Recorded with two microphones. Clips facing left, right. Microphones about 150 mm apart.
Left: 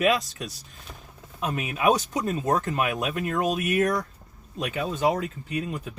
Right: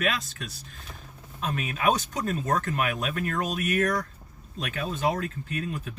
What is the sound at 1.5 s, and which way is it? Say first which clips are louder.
Speech: left 3 dB; 15° left (ahead or behind).